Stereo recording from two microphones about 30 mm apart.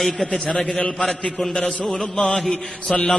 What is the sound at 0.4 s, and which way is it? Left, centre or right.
Speech, left.